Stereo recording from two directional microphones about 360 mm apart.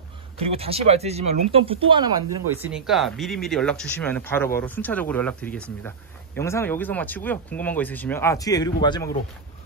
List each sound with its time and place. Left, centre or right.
0.5 s a man's voice: centre